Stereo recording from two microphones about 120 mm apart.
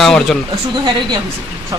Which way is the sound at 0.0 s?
5° left (ahead or behind).